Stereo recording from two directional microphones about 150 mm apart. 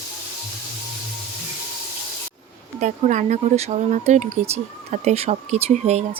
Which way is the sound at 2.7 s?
55° right (ahead or behind).